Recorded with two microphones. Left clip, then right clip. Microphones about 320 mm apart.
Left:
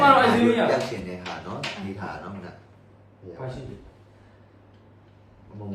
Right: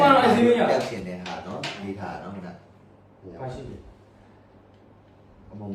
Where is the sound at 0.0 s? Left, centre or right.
Centre.